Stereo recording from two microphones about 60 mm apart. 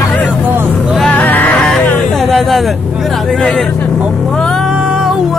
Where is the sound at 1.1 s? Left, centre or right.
Left.